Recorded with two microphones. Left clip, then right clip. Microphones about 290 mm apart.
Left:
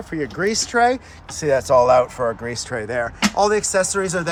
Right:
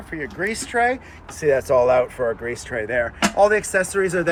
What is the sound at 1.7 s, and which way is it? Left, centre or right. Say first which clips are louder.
Speech: left 5 dB; centre.